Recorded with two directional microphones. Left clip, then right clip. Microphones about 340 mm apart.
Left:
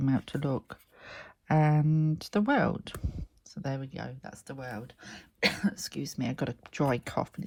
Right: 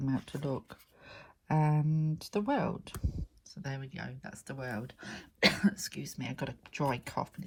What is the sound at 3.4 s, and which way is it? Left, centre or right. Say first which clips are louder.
Speech: left 7 dB; centre.